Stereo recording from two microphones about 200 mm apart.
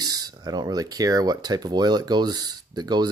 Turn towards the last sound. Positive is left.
turn(degrees=-20)  # may be behind; listen again after turning